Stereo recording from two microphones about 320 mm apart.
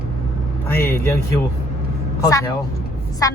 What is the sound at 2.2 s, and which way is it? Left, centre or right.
Speech, centre.